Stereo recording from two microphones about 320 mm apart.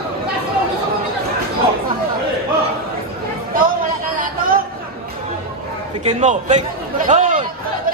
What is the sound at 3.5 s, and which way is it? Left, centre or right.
Chatter, right.